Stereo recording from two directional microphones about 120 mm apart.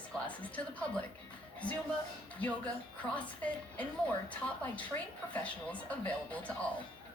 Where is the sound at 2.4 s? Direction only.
10° left (ahead or behind).